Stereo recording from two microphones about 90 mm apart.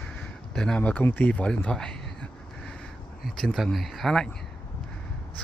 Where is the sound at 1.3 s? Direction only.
10° left (ahead or behind).